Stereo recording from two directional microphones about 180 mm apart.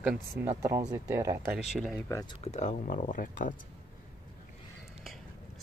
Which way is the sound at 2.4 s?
40° left (ahead or behind).